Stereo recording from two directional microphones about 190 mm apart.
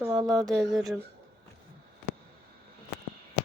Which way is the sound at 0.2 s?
20° right (ahead or behind).